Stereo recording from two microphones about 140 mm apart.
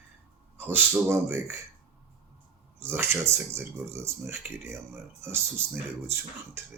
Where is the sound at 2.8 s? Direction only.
15° right (ahead or behind).